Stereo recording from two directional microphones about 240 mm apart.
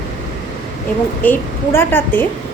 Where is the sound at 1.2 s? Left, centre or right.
Centre.